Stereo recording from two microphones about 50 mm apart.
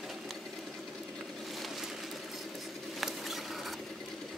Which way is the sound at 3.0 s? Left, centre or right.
Centre.